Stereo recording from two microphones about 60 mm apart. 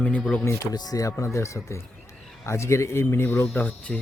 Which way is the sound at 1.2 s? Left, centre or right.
Left.